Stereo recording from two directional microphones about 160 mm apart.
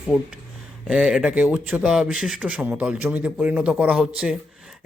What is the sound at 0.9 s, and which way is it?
Speech, 5° right (ahead or behind).